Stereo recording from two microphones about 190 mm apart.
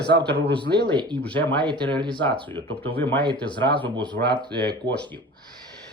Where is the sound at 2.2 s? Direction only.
10° left (ahead or behind).